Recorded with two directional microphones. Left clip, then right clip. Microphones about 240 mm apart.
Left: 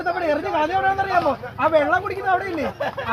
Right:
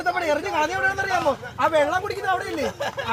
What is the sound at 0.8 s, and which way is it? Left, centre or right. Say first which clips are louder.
Speech: left 3 dB; right.